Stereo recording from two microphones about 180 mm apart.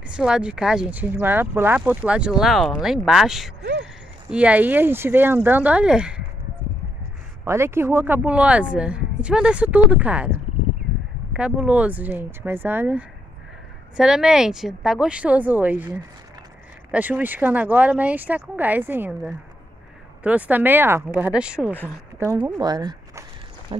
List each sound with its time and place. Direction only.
0.1 s speech: 5° right (ahead or behind)
7.4 s speech: 15° right (ahead or behind)
11.3 s speech: 5° right (ahead or behind)
16.9 s speech: 10° right (ahead or behind)
21.7 s speech: 10° left (ahead or behind)
22.4 s speech: 25° right (ahead or behind)